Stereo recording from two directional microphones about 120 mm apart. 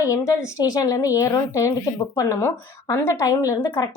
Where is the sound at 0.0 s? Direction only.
25° left (ahead or behind).